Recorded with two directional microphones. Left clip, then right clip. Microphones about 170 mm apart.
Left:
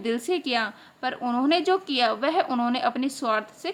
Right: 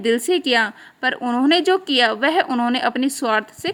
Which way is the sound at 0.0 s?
40° right (ahead or behind).